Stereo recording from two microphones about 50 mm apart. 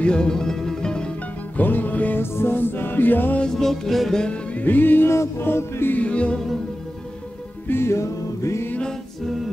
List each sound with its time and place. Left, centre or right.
0.0 s music: centre
1.6 s music: left
2.1 s music: left
3.4 s music: centre
4.6 s music: left
5.0 s music: left
5.4 s music: left
5.9 s music: left
7.6 s music: left